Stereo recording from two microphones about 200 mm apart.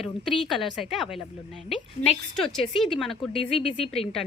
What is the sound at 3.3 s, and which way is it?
Speech, 30° left (ahead or behind).